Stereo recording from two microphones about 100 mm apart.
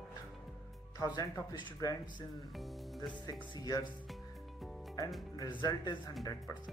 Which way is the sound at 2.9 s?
45° left (ahead or behind).